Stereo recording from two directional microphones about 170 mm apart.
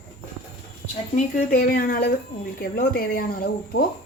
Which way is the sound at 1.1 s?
50° left (ahead or behind).